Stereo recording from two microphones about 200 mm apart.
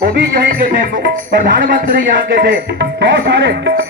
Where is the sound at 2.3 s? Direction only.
60° right (ahead or behind).